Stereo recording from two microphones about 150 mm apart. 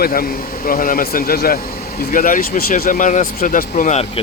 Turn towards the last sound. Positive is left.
turn(degrees=55)  # may be behind; listen again after turning